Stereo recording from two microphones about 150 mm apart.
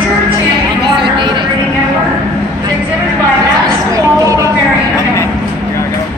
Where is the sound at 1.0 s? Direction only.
35° right (ahead or behind).